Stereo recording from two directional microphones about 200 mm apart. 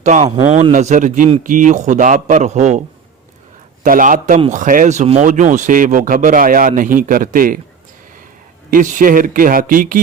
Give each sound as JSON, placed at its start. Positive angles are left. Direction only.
{"t": 0.0, "sound": "speech", "side_deg": -35}
{"t": 0.3, "sound": "speech", "side_deg": -25}
{"t": 3.8, "sound": "speech", "side_deg": -45}
{"t": 8.7, "sound": "speech", "side_deg": -40}